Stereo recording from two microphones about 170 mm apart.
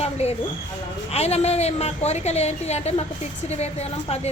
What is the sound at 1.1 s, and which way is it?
A woman's voice, 40° left (ahead or behind).